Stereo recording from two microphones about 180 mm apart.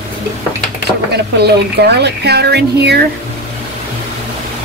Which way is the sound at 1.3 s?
65° right (ahead or behind).